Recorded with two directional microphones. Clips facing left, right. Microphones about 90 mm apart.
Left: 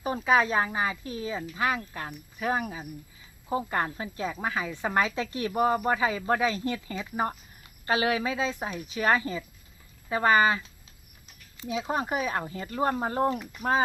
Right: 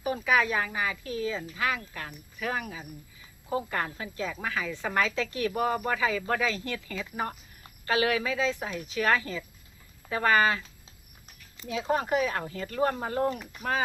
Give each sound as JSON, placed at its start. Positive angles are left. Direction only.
{"t": 0.0, "sound": "speech", "side_deg": 30}
{"t": 11.7, "sound": "speech", "side_deg": 20}